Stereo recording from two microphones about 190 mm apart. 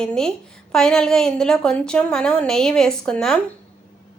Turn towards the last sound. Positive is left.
turn(degrees=5)  # may be behind; listen again after turning